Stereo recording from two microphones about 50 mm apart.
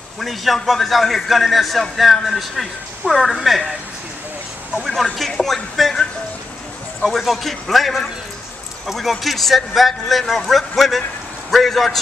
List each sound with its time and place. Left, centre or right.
0.2 s a man's voice: centre
4.8 s a man's voice: centre
7.0 s a man's voice: centre